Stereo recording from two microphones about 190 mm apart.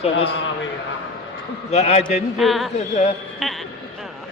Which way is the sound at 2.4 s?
Centre (ahead or behind).